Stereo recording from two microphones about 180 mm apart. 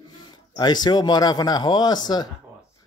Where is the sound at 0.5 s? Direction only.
25° left (ahead or behind).